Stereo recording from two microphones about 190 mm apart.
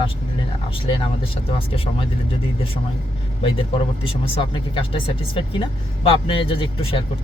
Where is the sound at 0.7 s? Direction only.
30° left (ahead or behind).